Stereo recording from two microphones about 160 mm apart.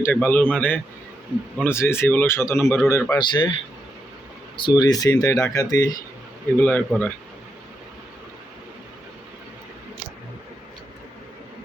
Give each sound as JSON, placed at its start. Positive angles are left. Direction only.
{"t": 0.0, "sound": "speech", "side_deg": 10}
{"t": 3.2, "sound": "speech", "side_deg": 30}
{"t": 4.5, "sound": "speech", "side_deg": 30}
{"t": 6.6, "sound": "speech", "side_deg": 10}